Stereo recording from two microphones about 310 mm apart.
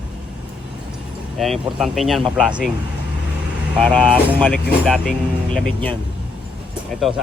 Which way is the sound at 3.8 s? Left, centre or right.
Centre.